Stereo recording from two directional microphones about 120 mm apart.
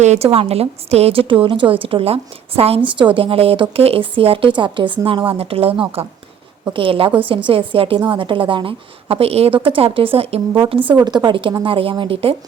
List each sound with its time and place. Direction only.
0.0 s a woman's voice: 70° right (ahead or behind)
0.3 s a woman's voice: 55° right (ahead or behind)
11.0 s a woman's voice: 35° right (ahead or behind)